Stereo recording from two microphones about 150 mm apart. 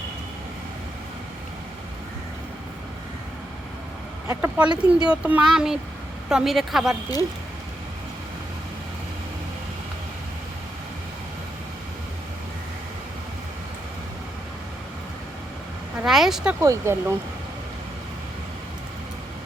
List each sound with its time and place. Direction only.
4.4 s speech: 10° right (ahead or behind)
16.0 s speech: centre (ahead or behind)
16.6 s speech: 20° right (ahead or behind)